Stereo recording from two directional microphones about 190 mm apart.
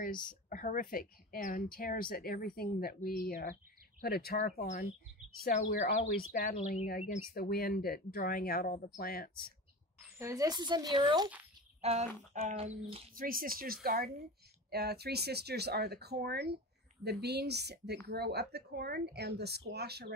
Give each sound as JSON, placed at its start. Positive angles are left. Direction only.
{"t": 0.0, "sound": "speech", "side_deg": 45}
{"t": 5.8, "sound": "speech", "side_deg": 45}
{"t": 6.5, "sound": "speech", "side_deg": 35}
{"t": 7.3, "sound": "speech", "side_deg": 55}
{"t": 10.1, "sound": "speech", "side_deg": -15}
{"t": 13.1, "sound": "speech", "side_deg": -50}